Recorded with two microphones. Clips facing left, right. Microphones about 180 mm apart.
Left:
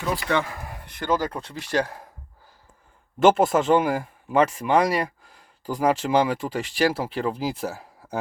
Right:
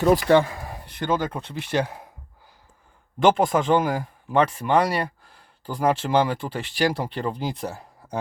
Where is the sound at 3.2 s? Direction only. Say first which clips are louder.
Left 1 dB; 5° left (ahead or behind).